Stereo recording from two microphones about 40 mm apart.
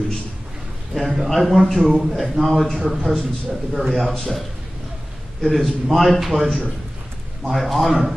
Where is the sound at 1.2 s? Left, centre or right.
Centre.